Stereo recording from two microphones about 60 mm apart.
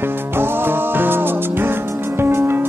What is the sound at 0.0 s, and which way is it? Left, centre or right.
Music, right.